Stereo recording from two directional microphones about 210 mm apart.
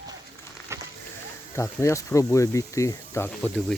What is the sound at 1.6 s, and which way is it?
Speech, 15° left (ahead or behind).